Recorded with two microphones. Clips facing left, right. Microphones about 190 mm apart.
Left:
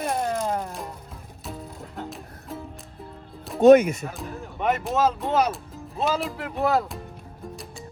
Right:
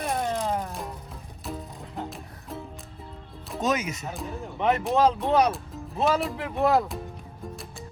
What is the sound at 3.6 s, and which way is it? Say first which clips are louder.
Speech: left 14 dB; 60° left (ahead or behind).